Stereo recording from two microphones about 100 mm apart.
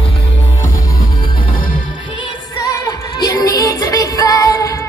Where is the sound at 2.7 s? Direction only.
35° left (ahead or behind).